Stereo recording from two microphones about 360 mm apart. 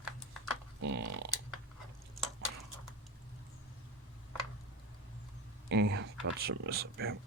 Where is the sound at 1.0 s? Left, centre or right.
Right.